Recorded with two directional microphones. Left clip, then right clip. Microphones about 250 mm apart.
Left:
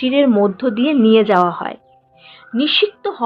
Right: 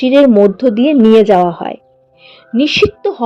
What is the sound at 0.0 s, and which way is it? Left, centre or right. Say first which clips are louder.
A woman's voice: right 7 dB; right.